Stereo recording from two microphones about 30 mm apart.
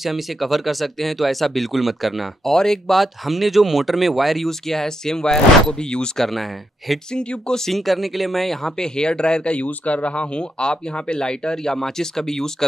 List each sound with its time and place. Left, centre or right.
0.0 s speech: centre
2.5 s speech: centre
2.9 s speech: centre
4.5 s speech: centre; by 6.0 s left
6.1 s speech: centre
7.1 s speech: left
7.7 s speech: centre
8.6 s speech: left
9.6 s speech: left
10.3 s speech: left; by 12.6 s centre